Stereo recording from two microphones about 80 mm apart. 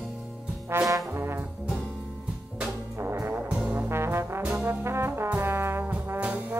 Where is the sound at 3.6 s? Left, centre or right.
Centre.